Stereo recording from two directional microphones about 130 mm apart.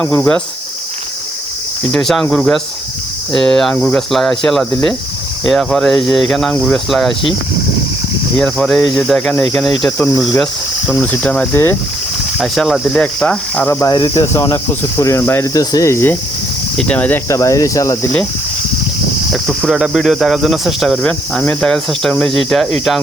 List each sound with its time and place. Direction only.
0.0 s speech: 15° left (ahead or behind)
1.9 s speech: 5° left (ahead or behind)
8.4 s speech: 5° left (ahead or behind)
12.4 s speech: centre (ahead or behind)
13.7 s speech: 20° left (ahead or behind)
16.7 s speech: 10° left (ahead or behind)
17.2 s speech: 25° left (ahead or behind)
19.3 s speech: centre (ahead or behind)